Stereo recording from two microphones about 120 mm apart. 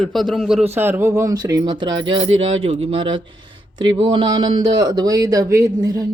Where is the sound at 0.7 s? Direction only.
20° right (ahead or behind).